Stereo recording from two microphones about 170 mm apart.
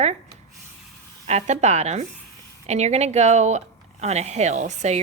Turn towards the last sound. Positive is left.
turn(degrees=-45)  # may be behind; listen again after turning